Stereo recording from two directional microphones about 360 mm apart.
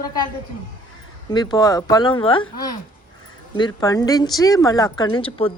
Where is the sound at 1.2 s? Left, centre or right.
Centre.